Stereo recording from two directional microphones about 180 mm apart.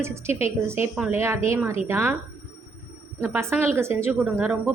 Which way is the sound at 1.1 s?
15° right (ahead or behind).